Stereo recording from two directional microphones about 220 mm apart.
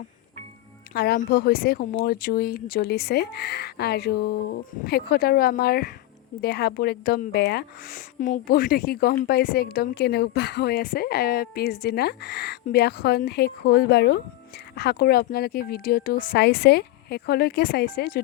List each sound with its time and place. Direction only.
0.9 s speech: 45° left (ahead or behind)